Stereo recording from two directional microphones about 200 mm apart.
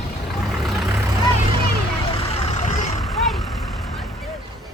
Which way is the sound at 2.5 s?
35° left (ahead or behind).